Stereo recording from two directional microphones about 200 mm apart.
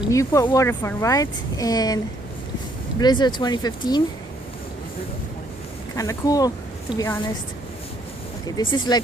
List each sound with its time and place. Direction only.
0.1 s speech: 15° left (ahead or behind)
3.0 s speech: 20° left (ahead or behind)
6.0 s speech: 15° left (ahead or behind)
8.7 s speech: 20° left (ahead or behind)